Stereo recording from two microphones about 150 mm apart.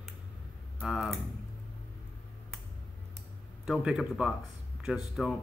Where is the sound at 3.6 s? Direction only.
5° right (ahead or behind).